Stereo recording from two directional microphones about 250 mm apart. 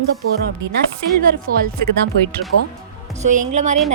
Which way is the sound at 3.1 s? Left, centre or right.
Right.